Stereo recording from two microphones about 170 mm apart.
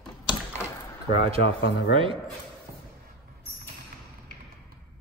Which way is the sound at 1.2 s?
35° right (ahead or behind).